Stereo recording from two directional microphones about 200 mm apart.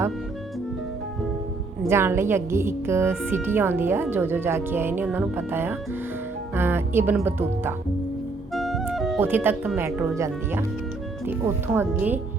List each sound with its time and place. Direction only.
1.9 s speech: 10° right (ahead or behind)
8.5 s music: centre (ahead or behind)
9.2 s speech: 10° right (ahead or behind)